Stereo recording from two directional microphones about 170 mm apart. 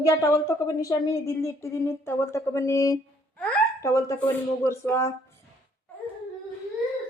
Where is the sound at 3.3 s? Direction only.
5° left (ahead or behind).